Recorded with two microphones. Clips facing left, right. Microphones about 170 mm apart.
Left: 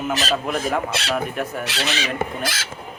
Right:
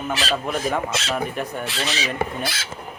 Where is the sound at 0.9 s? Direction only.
60° left (ahead or behind).